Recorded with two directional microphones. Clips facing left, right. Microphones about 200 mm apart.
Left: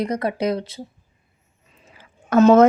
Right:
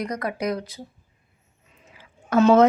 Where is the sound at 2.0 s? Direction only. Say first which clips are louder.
Left 4 dB; 45° left (ahead or behind).